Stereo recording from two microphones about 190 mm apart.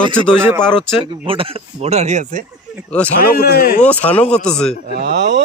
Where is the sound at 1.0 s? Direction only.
25° right (ahead or behind).